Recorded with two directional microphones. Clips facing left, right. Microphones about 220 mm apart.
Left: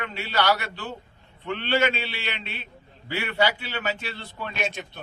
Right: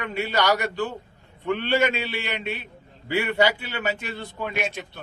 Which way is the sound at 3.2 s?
20° right (ahead or behind).